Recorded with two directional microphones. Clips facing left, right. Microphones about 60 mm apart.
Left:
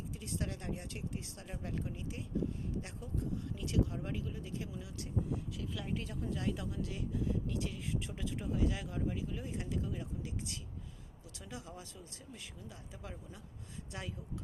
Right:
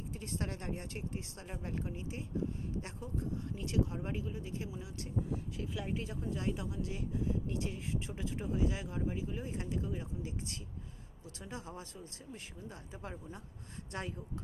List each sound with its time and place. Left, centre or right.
0.1 s speech: right
5.7 s speech: right